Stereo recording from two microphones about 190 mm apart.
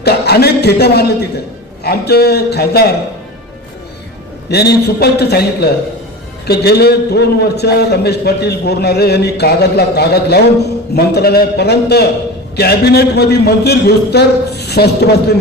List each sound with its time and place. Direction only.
0.0 s a man's voice: 55° left (ahead or behind)
4.5 s a man's voice: 60° left (ahead or behind)